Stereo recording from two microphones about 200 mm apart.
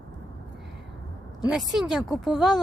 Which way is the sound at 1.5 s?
Centre (ahead or behind).